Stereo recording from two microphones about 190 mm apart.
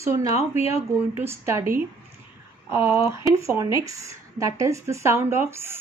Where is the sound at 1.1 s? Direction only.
15° right (ahead or behind).